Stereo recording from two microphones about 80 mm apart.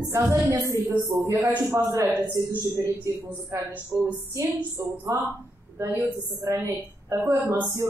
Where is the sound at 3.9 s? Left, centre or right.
Right.